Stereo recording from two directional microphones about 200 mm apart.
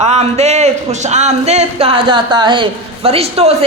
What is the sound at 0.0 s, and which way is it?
Speech, 35° right (ahead or behind).